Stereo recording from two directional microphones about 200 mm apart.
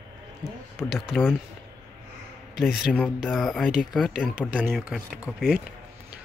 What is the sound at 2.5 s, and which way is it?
Speech, centre (ahead or behind).